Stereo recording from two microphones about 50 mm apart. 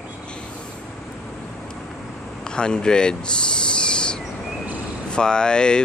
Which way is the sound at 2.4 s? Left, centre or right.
Centre.